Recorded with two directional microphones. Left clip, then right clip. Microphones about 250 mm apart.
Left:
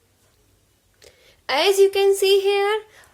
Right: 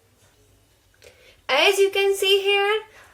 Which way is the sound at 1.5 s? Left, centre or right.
Left.